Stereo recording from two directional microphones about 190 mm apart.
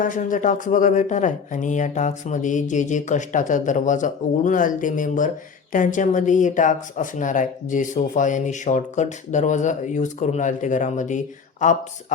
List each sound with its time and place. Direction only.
0.0 s speech: 45° left (ahead or behind)